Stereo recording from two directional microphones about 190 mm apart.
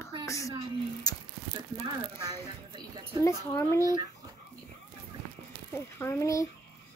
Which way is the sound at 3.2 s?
15° left (ahead or behind).